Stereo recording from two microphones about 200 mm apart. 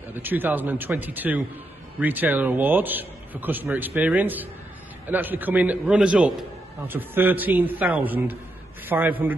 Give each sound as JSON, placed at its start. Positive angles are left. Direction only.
{"t": 0.1, "sound": "a man's voice", "side_deg": -10}